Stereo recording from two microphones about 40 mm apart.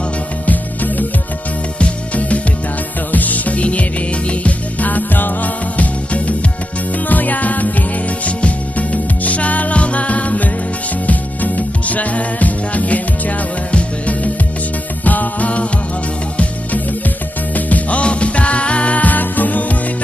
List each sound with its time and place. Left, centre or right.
0.4 s music: left
1.8 s music: left
15.0 s music: left
17.5 s music: left